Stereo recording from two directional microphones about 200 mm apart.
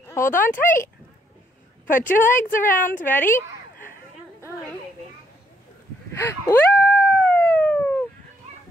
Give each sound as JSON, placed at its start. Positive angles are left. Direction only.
{"t": 0.0, "sound": "speech", "side_deg": 15}
{"t": 1.9, "sound": "speech", "side_deg": 40}
{"t": 3.0, "sound": "speech", "side_deg": 10}
{"t": 6.1, "sound": "a sound", "side_deg": 10}